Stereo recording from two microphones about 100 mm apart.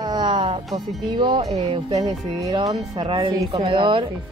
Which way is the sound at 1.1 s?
50° right (ahead or behind).